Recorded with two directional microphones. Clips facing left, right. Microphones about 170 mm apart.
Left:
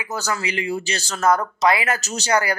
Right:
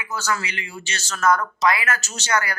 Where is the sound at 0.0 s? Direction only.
35° left (ahead or behind).